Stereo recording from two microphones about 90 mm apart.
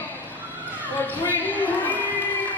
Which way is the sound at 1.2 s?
20° left (ahead or behind).